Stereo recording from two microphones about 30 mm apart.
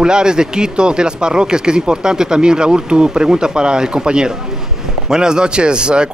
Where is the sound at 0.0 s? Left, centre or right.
Right.